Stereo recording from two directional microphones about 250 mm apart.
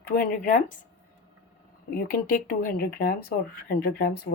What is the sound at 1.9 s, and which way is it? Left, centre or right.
Speech, left.